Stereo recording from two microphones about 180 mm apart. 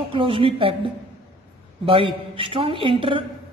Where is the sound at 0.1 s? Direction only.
30° right (ahead or behind).